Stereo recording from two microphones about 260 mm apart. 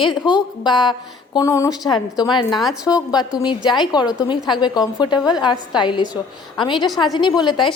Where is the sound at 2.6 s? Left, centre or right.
Centre.